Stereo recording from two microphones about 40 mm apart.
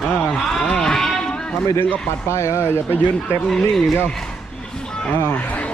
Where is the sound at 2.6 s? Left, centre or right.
Left.